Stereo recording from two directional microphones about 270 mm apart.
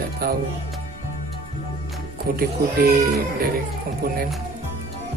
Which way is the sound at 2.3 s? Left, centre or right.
Right.